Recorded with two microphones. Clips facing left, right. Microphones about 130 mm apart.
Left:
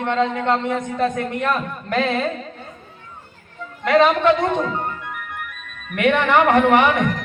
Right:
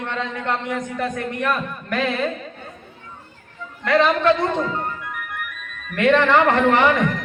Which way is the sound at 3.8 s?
20° left (ahead or behind).